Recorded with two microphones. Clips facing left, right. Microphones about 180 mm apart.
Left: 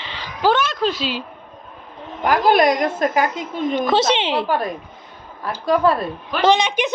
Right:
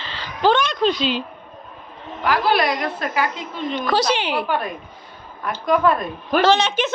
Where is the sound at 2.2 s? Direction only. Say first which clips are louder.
Left 4 dB; 45° left (ahead or behind).